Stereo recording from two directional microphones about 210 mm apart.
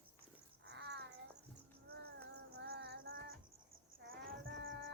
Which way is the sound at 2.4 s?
50° right (ahead or behind).